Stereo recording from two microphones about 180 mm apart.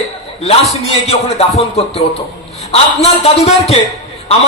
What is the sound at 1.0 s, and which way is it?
A man's voice, 35° left (ahead or behind).